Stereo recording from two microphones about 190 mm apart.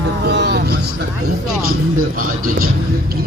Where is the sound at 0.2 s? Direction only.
60° right (ahead or behind).